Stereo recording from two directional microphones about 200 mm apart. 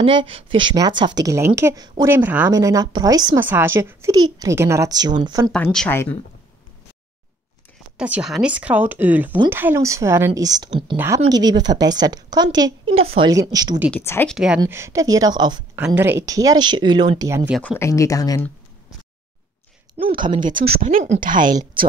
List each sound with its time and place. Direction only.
0.0 s a woman's voice: 25° right (ahead or behind)
5.5 s speech: 5° left (ahead or behind)
8.0 s a woman's voice: 5° right (ahead or behind); by 13.3 s 30° right (ahead or behind)
13.3 s speech: 20° right (ahead or behind)
13.9 s speech: 10° left (ahead or behind)
14.3 s a woman's voice: 5° right (ahead or behind)
14.6 s speech: 15° right (ahead or behind)
15.7 s a woman's voice: 10° right (ahead or behind)
17.5 s speech: 5° left (ahead or behind)
20.3 s speech: 40° right (ahead or behind)